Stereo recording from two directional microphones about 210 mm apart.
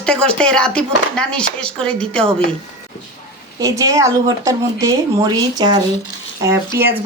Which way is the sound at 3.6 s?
15° right (ahead or behind).